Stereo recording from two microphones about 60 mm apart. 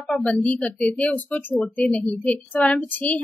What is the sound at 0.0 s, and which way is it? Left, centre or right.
Speech, centre.